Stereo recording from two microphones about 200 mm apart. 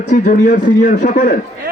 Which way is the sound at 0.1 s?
40° left (ahead or behind).